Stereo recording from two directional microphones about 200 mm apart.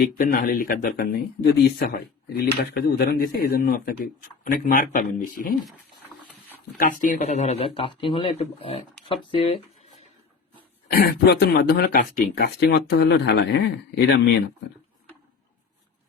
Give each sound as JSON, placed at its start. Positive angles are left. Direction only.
{"t": 0.0, "sound": "speech", "side_deg": 45}
{"t": 6.7, "sound": "speech", "side_deg": 40}
{"t": 10.9, "sound": "speech", "side_deg": 50}